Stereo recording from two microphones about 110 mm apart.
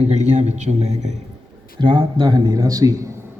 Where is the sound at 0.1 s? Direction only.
90° right.